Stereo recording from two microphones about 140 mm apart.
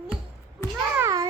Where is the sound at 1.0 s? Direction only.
25° right (ahead or behind).